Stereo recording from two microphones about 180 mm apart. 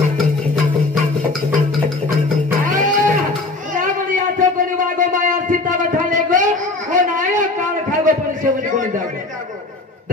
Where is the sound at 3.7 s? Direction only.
45° right (ahead or behind).